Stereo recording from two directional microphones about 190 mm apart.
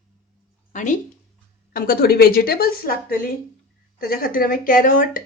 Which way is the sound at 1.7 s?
50° left (ahead or behind).